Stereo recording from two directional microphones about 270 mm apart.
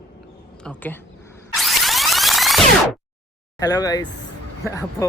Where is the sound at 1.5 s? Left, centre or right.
Centre.